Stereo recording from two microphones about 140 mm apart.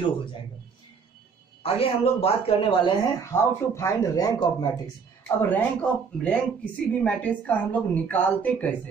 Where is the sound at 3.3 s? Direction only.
20° left (ahead or behind).